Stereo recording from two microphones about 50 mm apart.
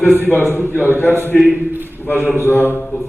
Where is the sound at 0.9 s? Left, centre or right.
Left.